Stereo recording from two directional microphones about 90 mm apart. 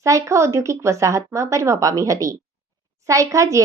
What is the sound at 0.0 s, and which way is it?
A woman's voice, 35° right (ahead or behind).